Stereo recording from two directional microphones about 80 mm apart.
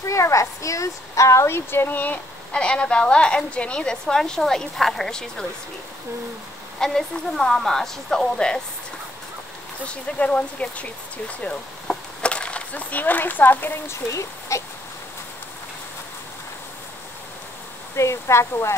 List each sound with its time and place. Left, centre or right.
0.0 s speech: left
2.5 s a woman's voice: centre
6.8 s a woman's voice: centre
9.8 s speech: centre
14.5 s speech: left
17.9 s speech: left